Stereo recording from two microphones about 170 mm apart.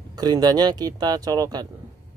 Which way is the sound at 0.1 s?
25° right (ahead or behind).